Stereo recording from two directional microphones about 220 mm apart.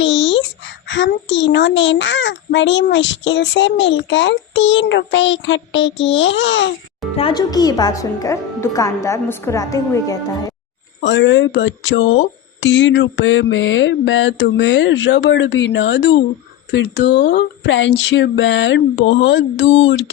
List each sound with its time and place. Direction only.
0.0 s a sound: 55° left (ahead or behind)
0.9 s a woman's voice: 55° left (ahead or behind)
7.2 s a woman's voice: 20° left (ahead or behind)
11.0 s a woman's voice: 55° left (ahead or behind)